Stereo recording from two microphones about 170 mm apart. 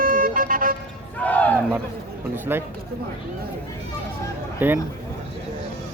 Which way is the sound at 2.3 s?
15° right (ahead or behind).